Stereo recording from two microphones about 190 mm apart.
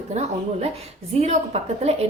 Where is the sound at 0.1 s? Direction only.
35° right (ahead or behind).